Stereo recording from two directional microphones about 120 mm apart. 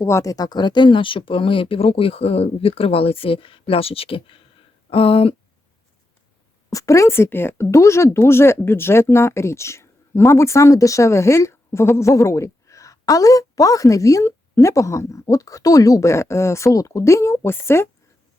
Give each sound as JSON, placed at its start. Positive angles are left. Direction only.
{"t": 0.0, "sound": "speech", "side_deg": 25}
{"t": 6.7, "sound": "a woman's voice", "side_deg": 25}